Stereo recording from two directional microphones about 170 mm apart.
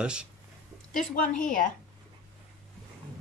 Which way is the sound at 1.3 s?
50° left (ahead or behind).